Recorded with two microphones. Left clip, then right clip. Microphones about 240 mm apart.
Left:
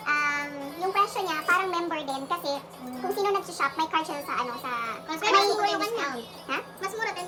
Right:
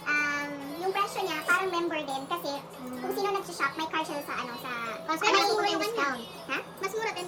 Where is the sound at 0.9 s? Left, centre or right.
Left.